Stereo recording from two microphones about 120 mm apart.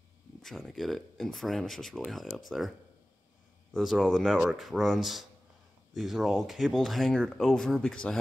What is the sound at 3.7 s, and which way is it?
Speech, centre (ahead or behind).